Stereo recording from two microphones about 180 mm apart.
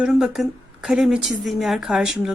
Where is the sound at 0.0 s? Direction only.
5° right (ahead or behind).